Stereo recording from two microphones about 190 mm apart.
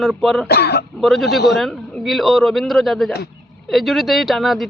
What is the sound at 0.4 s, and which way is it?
Speech, 60° left (ahead or behind).